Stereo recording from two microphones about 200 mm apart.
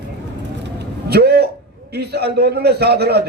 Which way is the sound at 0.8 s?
50° right (ahead or behind).